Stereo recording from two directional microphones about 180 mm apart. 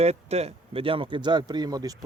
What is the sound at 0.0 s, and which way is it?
Speech, 35° right (ahead or behind).